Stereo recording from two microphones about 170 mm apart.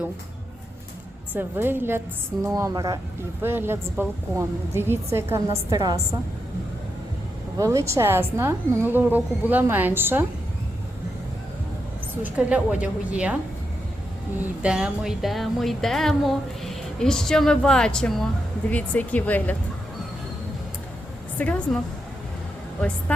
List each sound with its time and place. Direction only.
1.3 s a woman's voice: 10° right (ahead or behind)
7.6 s a woman's voice: 15° right (ahead or behind)
12.2 s a woman's voice: 10° right (ahead or behind)
14.6 s speech: 5° right (ahead or behind)
21.3 s speech: 5° left (ahead or behind)